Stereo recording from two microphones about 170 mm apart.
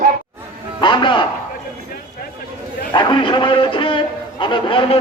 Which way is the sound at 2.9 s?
30° left (ahead or behind).